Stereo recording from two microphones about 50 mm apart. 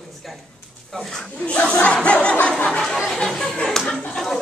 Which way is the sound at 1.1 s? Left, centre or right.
Left.